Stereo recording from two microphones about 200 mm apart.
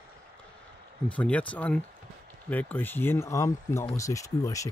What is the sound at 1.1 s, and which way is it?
Speech, 5° left (ahead or behind).